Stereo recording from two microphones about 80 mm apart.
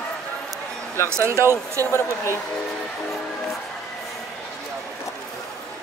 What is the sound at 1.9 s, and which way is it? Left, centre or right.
Speech, left.